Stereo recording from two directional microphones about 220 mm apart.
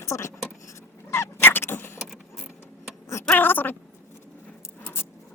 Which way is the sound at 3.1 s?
10° left (ahead or behind).